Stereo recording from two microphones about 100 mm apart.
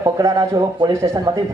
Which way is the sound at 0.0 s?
40° right (ahead or behind).